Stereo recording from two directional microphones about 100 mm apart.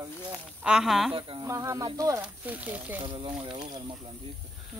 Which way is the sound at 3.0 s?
55° right (ahead or behind).